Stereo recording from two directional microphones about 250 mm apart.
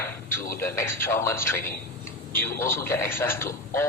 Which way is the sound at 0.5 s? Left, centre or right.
Centre.